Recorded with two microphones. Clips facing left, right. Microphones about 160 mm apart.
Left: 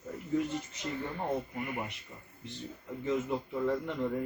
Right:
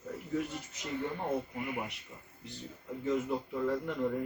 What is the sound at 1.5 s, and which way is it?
Speech, 10° right (ahead or behind).